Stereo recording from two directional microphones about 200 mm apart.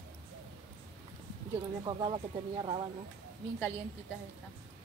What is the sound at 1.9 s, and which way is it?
Speech, 25° right (ahead or behind).